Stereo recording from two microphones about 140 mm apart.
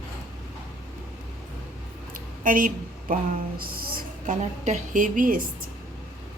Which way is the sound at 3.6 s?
90° right.